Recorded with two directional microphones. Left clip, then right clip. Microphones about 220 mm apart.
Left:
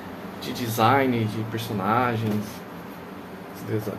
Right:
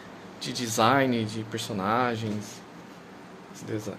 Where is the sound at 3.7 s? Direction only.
50° right (ahead or behind).